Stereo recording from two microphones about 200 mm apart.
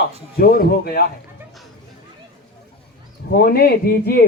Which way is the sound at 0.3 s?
50° left (ahead or behind).